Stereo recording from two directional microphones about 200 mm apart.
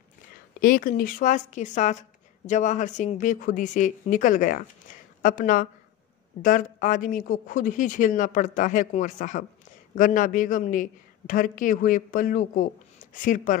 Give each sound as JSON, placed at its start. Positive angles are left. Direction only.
{"t": 0.6, "sound": "speech", "side_deg": 45}